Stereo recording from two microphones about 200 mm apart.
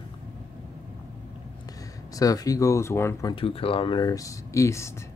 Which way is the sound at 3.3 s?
30° left (ahead or behind).